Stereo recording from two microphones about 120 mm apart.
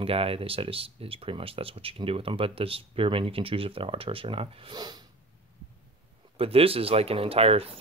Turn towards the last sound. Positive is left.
turn(degrees=-55)  # may be behind; listen again after turning